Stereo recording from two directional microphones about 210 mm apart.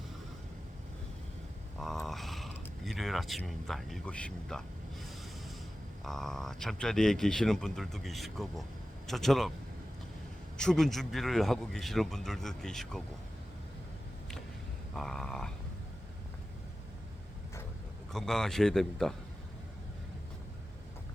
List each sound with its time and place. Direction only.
1.8 s a sound: centre (ahead or behind)
6.0 s speech: centre (ahead or behind)
10.6 s speech: centre (ahead or behind)
14.9 s speech: centre (ahead or behind)
18.1 s speech: centre (ahead or behind)